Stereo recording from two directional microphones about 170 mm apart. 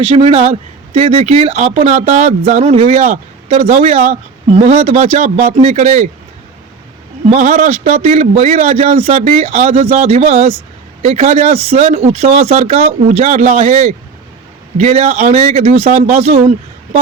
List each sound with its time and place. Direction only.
0.1 s speech: 35° right (ahead or behind)
7.3 s speech: 45° right (ahead or behind)